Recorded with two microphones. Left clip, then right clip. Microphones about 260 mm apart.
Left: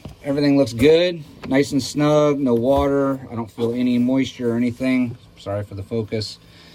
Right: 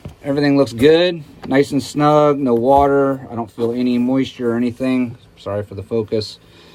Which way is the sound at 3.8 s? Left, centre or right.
Centre.